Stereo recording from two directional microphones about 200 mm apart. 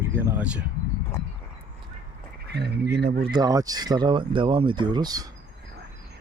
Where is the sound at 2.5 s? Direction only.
55° right (ahead or behind).